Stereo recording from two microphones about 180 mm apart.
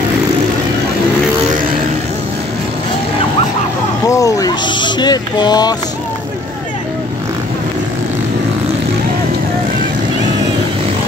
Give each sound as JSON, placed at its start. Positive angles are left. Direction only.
{"t": 4.1, "sound": "speech", "side_deg": 20}